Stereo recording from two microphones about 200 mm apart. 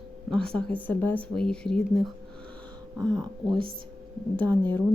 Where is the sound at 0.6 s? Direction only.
5° left (ahead or behind).